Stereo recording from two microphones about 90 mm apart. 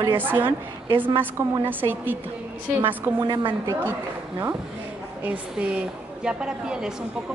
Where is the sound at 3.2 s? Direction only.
55° right (ahead or behind).